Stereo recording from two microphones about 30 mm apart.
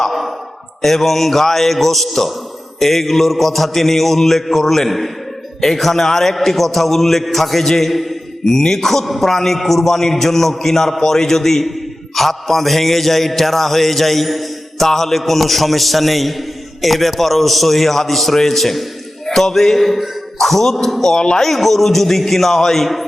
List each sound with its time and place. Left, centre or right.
0.8 s a man's voice: centre
2.7 s mantra: centre
5.5 s a man's voice: centre
12.1 s mantra: centre
19.3 s a man's voice: centre
21.0 s speech: left
21.4 s a man's voice: centre